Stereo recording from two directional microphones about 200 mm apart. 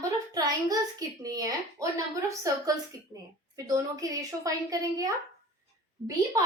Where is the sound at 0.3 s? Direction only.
20° right (ahead or behind).